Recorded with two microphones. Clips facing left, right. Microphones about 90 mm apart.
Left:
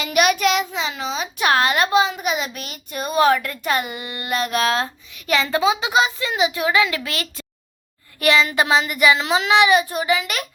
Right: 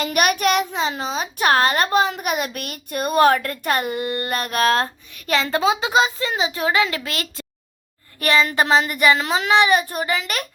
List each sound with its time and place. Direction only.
0.0 s a child's voice: 50° right (ahead or behind)